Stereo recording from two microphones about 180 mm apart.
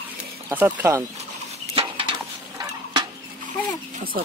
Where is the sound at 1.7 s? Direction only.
30° right (ahead or behind).